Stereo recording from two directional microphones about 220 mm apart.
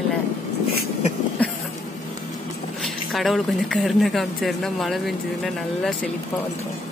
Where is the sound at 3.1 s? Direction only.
Centre (ahead or behind).